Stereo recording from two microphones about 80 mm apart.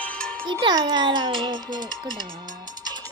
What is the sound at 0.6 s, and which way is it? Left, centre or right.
A child's voice, right.